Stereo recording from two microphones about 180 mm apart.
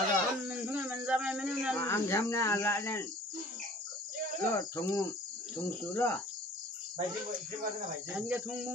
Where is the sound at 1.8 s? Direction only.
15° left (ahead or behind).